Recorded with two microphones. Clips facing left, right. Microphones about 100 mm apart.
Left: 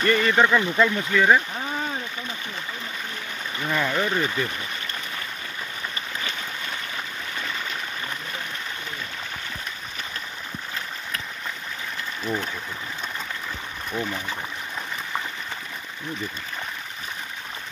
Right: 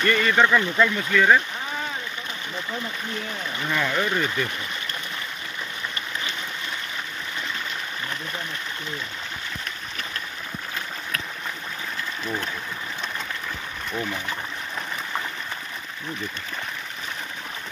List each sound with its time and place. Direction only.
0.0 s speech: 25° left (ahead or behind)
3.6 s speech: 10° left (ahead or behind)
13.9 s speech: 5° left (ahead or behind)